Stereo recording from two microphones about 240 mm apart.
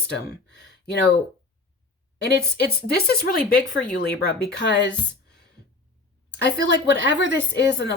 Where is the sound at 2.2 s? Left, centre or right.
Left.